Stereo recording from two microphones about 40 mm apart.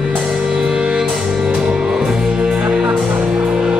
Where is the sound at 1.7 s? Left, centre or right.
Centre.